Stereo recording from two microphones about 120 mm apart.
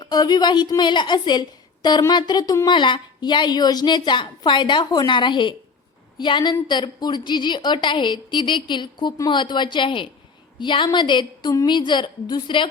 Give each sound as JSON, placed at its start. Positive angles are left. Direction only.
{"t": 0.0, "sound": "a woman's voice", "side_deg": 35}